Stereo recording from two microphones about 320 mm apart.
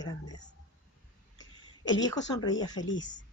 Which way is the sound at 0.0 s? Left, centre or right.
Centre.